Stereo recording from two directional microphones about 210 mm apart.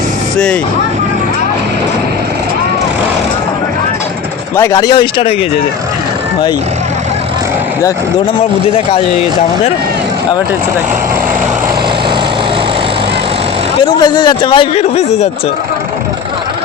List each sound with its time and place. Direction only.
4.5 s a man's voice: 15° left (ahead or behind)
13.8 s a man's voice: 20° left (ahead or behind)